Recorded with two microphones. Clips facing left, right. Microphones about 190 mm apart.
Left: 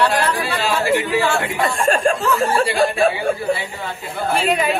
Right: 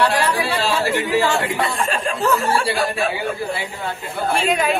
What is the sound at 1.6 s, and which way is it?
Speech, 45° left (ahead or behind).